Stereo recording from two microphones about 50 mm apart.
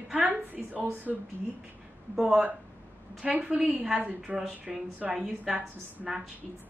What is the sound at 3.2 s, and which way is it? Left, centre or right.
Speech, right.